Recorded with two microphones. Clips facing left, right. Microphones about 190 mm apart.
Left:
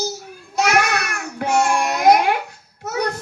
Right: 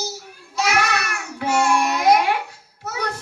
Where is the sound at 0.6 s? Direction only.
50° left (ahead or behind).